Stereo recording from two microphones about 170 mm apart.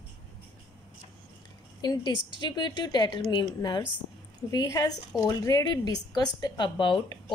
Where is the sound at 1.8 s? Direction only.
25° left (ahead or behind).